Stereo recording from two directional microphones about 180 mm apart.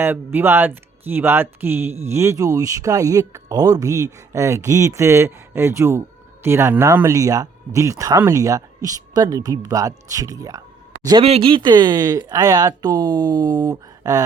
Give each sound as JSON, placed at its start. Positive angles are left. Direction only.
{"t": 0.0, "sound": "speech", "side_deg": -10}